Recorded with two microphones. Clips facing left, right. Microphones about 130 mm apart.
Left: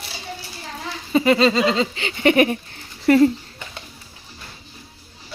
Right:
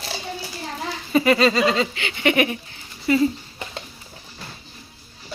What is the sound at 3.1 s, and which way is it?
Speech, 60° left (ahead or behind).